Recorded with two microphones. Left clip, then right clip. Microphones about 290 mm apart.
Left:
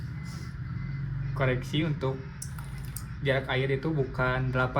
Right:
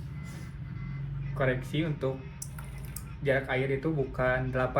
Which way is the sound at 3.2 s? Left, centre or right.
Centre.